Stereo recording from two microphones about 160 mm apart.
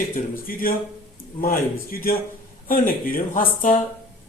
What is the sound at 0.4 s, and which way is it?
A man's voice, 65° left (ahead or behind).